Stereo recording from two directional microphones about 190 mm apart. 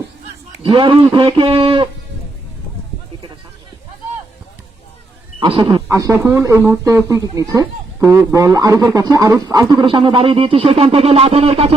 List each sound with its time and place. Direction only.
0.6 s speech: 25° right (ahead or behind)
5.4 s speech: 25° right (ahead or behind)